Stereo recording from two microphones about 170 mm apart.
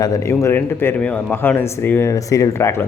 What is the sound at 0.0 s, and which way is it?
A man's voice, 20° left (ahead or behind).